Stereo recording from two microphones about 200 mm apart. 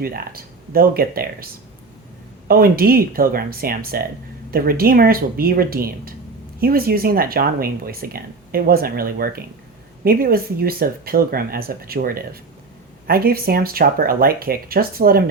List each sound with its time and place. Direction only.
0.0 s speech: 45° right (ahead or behind)
2.5 s speech: 50° right (ahead or behind)